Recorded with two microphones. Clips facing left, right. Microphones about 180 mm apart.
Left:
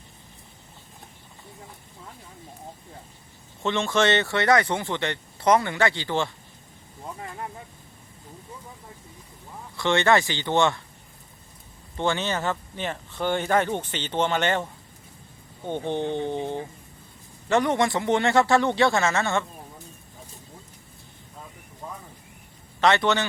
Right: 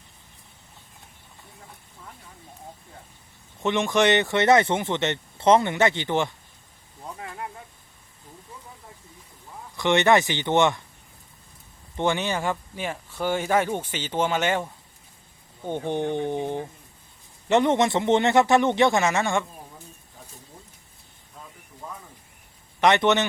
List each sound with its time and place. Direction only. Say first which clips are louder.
3.6 s speech: right 2 dB; 15° right (ahead or behind)
9.7 s speech: right 2 dB; 20° right (ahead or behind)
11.9 s speech: right 1 dB; 15° right (ahead or behind)
21.8 s a sound: left 1 dB; 10° left (ahead or behind)
22.8 s speech: right 2 dB; 20° right (ahead or behind)